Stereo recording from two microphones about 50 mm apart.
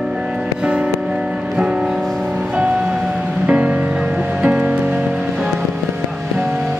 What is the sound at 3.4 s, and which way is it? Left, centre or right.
Music, right.